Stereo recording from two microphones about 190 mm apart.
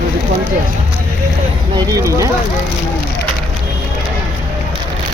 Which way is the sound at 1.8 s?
20° right (ahead or behind).